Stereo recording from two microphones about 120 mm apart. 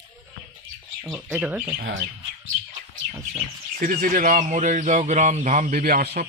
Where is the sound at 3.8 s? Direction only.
90° right.